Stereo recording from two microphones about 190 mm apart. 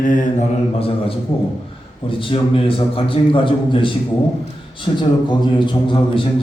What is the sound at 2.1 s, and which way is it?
A man's voice, 25° left (ahead or behind).